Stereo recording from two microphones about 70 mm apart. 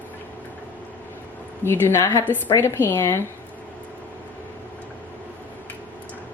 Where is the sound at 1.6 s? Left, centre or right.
Left.